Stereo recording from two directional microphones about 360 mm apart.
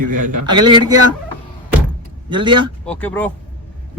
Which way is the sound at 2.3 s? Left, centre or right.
Centre.